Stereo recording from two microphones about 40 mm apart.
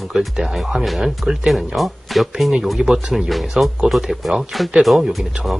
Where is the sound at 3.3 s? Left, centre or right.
Centre.